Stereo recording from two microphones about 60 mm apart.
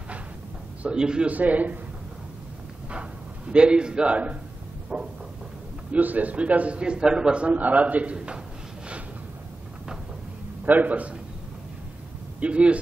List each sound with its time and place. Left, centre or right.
0.8 s a man's voice: centre
1.3 s a man's voice: right
2.9 s a man's voice: centre
10.6 s a man's voice: right
12.4 s a man's voice: centre